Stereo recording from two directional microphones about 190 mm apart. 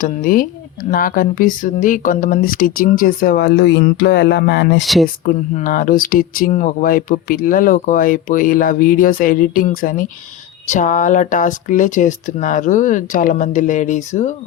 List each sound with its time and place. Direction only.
0.0 s speech: 45° left (ahead or behind)
5.2 s speech: 45° left (ahead or behind)